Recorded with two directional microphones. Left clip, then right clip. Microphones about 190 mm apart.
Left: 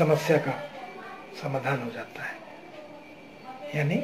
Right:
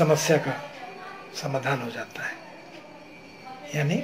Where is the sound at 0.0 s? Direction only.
5° right (ahead or behind).